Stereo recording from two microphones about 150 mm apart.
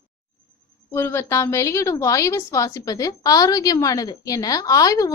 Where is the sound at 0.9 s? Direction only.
15° left (ahead or behind).